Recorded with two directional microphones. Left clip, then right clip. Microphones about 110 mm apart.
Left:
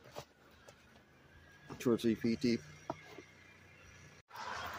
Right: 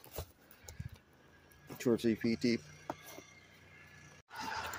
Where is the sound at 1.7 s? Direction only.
Centre (ahead or behind).